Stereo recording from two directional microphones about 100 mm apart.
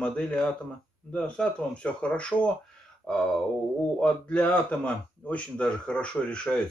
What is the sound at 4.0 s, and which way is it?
Speech, 10° left (ahead or behind).